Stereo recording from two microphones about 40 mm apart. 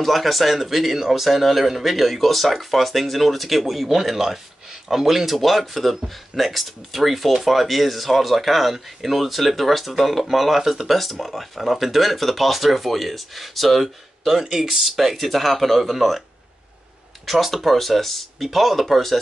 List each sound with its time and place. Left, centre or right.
0.0 s speech: centre
17.3 s speech: centre